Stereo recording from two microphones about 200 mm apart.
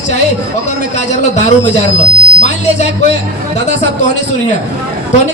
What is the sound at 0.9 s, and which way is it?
Speech, 35° left (ahead or behind).